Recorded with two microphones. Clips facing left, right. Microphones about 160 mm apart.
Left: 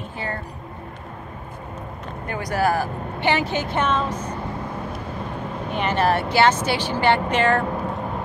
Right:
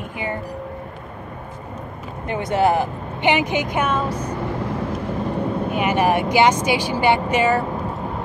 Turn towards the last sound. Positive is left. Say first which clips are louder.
# right 1 dB
turn(degrees=-10)  # may be behind; listen again after turning